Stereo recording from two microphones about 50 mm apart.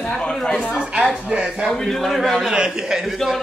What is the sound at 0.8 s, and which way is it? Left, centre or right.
Speech, right.